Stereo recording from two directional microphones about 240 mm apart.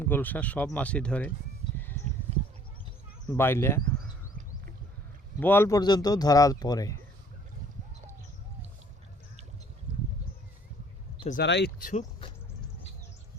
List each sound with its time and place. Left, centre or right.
0.0 s speech: centre
3.2 s speech: centre
5.4 s speech: centre
11.2 s speech: left
11.4 s speech: left